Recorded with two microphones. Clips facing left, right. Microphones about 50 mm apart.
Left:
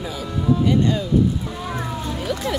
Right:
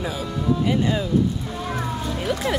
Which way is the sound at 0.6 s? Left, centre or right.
Centre.